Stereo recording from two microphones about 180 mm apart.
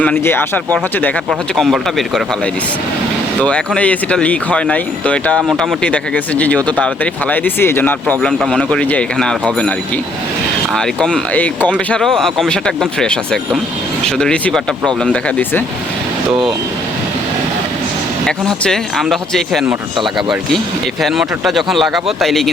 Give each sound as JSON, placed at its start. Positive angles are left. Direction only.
{"t": 0.0, "sound": "speech", "side_deg": 10}
{"t": 3.4, "sound": "speech", "side_deg": 5}
{"t": 10.8, "sound": "speech", "side_deg": 5}
{"t": 18.3, "sound": "speech", "side_deg": 5}
{"t": 21.0, "sound": "speech", "side_deg": 0}